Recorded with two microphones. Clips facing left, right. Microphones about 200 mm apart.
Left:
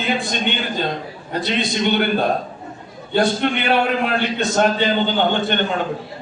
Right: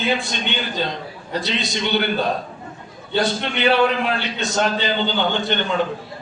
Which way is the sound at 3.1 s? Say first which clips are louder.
Left 4 dB; 50° left (ahead or behind).